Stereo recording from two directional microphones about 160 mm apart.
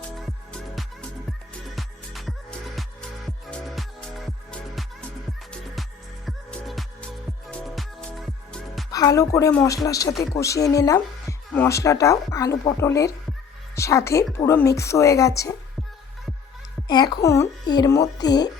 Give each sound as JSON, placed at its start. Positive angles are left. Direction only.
{"t": 1.7, "sound": "music", "side_deg": 0}
{"t": 6.2, "sound": "music", "side_deg": 0}
{"t": 8.9, "sound": "a woman's voice", "side_deg": 20}
{"t": 16.9, "sound": "speech", "side_deg": 25}